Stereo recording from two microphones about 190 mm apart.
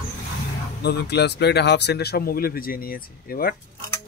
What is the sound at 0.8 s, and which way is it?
Speech, 60° left (ahead or behind).